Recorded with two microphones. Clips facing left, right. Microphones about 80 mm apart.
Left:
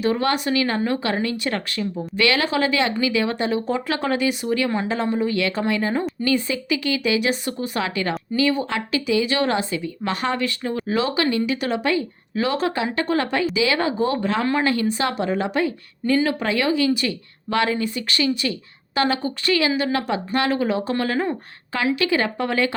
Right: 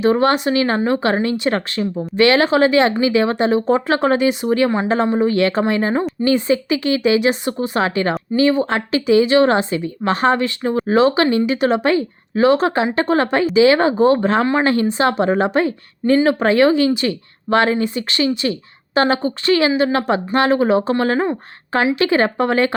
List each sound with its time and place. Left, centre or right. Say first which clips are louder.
0.0 s a woman's voice: right 6 dB; right